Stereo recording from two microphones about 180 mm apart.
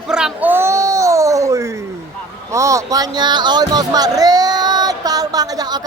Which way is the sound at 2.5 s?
15° right (ahead or behind).